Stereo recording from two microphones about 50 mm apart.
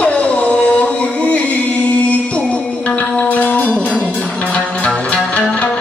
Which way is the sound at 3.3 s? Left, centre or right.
Left.